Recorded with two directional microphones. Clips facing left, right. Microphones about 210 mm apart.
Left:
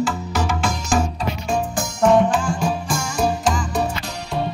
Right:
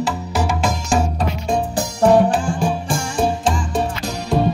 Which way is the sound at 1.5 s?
35° right (ahead or behind).